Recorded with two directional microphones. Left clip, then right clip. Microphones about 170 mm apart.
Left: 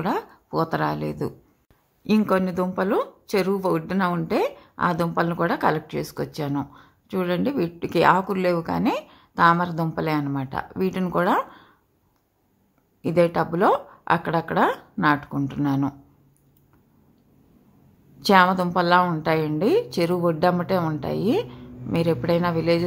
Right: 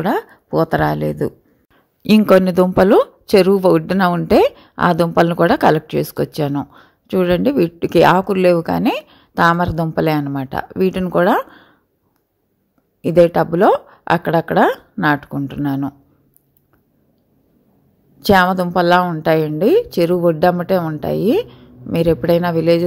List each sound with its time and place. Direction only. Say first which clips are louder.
0.0 s a woman's voice: right 7 dB; 30° right (ahead or behind)
2.0 s speech: right 10 dB; 40° right (ahead or behind)
13.0 s a woman's voice: right 8 dB; 30° right (ahead or behind)
18.2 s a woman's voice: right 4 dB; 25° right (ahead or behind)